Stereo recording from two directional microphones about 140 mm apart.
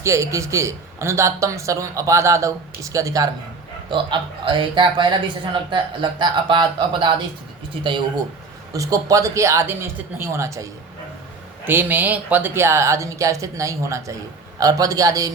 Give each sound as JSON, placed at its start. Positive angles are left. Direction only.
{"t": 0.0, "sound": "speech", "side_deg": -20}
{"t": 3.8, "sound": "speech", "side_deg": -35}
{"t": 8.7, "sound": "speech", "side_deg": -25}